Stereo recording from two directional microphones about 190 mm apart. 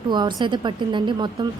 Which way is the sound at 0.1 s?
25° right (ahead or behind).